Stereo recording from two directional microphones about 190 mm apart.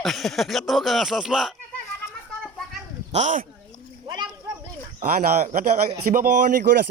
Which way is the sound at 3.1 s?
40° right (ahead or behind).